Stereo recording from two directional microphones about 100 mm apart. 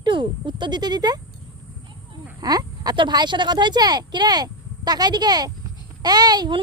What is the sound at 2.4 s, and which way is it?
Speech, 40° right (ahead or behind).